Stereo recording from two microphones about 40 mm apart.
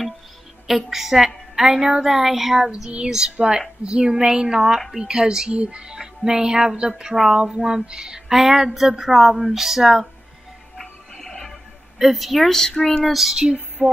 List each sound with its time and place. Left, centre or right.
0.7 s a woman's voice: centre
3.3 s a woman's voice: right; by 10.0 s centre
10.8 s music: centre
12.0 s speech: centre
12.4 s speech: centre
13.1 s speech: centre
13.8 s music: right